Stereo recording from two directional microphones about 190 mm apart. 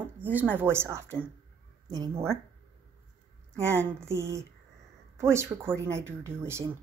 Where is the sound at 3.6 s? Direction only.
15° right (ahead or behind).